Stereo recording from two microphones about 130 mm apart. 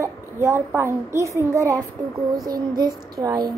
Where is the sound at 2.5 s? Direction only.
30° right (ahead or behind).